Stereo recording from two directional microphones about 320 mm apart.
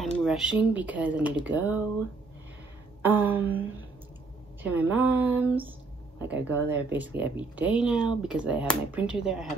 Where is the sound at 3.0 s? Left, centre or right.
Centre.